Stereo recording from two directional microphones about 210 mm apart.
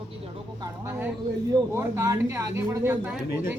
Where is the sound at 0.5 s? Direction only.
10° right (ahead or behind).